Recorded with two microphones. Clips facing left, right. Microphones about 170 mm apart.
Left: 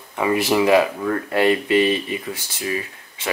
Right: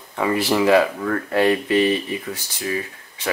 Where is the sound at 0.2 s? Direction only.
15° left (ahead or behind).